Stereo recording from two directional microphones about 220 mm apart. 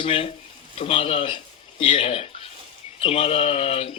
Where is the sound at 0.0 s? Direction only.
25° left (ahead or behind).